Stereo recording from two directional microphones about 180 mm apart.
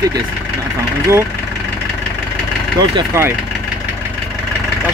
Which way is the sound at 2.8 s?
20° right (ahead or behind).